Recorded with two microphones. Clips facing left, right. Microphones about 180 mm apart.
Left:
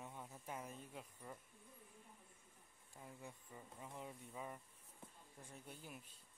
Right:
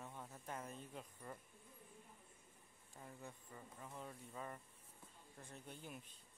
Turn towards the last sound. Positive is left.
turn(degrees=5)  # may be behind; listen again after turning